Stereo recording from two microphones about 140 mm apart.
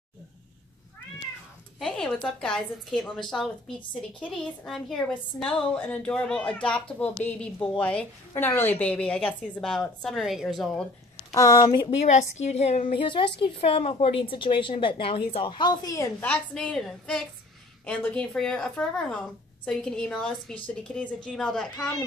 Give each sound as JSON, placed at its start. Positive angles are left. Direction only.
{"t": 1.8, "sound": "a woman's voice", "side_deg": 5}
{"t": 11.3, "sound": "a woman's voice", "side_deg": 25}
{"t": 12.0, "sound": "a woman's voice", "side_deg": 55}
{"t": 16.2, "sound": "a woman's voice", "side_deg": 10}